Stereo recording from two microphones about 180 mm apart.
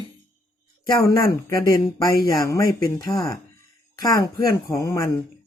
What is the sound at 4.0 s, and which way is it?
Speech, 20° left (ahead or behind).